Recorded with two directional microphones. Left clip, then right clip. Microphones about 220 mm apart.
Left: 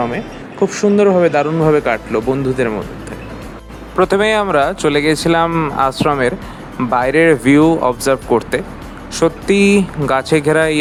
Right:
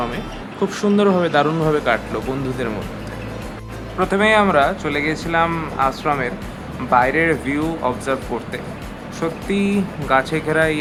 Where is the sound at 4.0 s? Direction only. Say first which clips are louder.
Left 2 dB; 40° left (ahead or behind).